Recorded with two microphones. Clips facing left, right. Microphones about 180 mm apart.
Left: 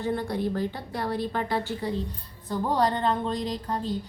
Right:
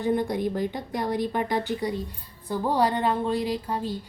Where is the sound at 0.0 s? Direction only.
15° right (ahead or behind).